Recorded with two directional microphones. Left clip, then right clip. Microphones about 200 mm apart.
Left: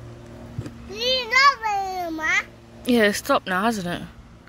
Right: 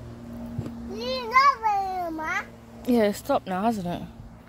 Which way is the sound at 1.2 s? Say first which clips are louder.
Left 1 dB; 40° left (ahead or behind).